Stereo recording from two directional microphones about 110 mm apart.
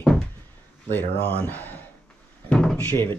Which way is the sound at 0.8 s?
20° left (ahead or behind).